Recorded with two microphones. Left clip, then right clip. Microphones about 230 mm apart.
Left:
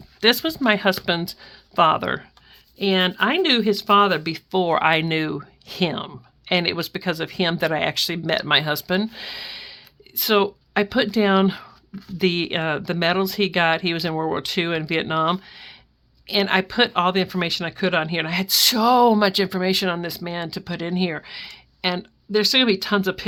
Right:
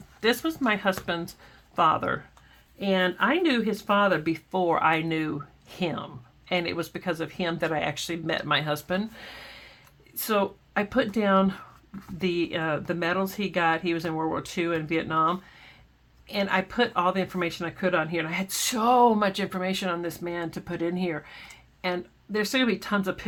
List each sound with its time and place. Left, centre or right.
0.2 s speech: left